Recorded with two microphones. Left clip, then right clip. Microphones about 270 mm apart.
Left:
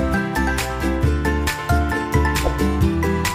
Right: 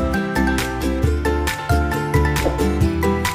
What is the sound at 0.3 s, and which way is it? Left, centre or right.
Music, centre.